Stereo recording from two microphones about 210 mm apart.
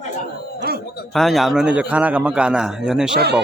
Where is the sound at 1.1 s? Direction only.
Centre (ahead or behind).